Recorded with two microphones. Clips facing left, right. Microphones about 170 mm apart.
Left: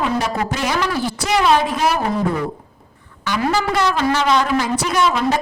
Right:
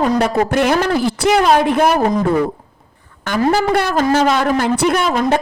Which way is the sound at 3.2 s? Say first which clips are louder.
Right 4 dB; 45° right (ahead or behind).